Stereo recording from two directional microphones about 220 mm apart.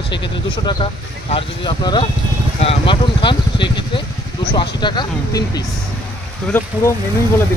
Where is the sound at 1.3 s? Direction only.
20° left (ahead or behind).